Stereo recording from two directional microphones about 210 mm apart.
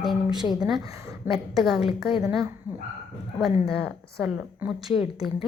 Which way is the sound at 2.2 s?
15° right (ahead or behind).